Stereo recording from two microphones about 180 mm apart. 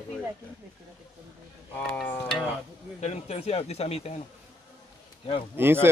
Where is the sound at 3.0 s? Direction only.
35° left (ahead or behind).